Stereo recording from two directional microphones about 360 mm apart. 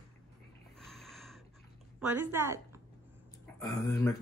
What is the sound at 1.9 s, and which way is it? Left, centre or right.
Speech, centre.